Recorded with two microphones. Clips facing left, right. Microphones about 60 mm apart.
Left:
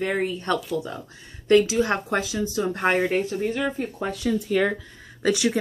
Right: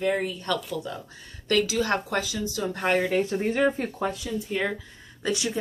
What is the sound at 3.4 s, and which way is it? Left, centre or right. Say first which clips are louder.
Speech: right 2 dB; right.